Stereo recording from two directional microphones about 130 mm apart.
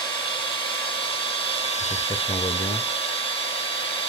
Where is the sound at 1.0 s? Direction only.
45° left (ahead or behind).